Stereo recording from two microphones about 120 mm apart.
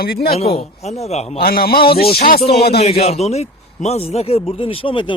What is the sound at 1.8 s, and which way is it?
Speech, 50° left (ahead or behind).